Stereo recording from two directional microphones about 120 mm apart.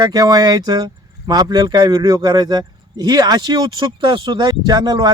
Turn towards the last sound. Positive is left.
turn(degrees=-35)  # may be behind; listen again after turning